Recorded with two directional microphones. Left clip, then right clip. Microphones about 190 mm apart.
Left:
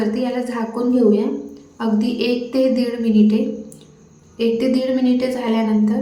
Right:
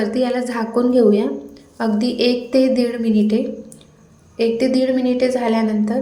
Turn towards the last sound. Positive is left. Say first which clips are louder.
# right 1 dB
turn(degrees=-20)  # may be behind; listen again after turning